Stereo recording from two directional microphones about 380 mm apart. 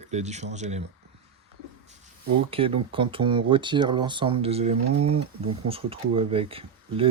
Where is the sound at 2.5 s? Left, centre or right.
Centre.